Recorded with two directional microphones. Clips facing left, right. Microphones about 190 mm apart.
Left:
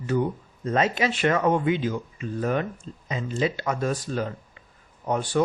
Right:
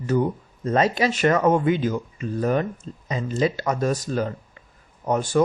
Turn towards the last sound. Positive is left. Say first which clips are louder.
# right 3 dB
turn(degrees=-45)  # may be behind; listen again after turning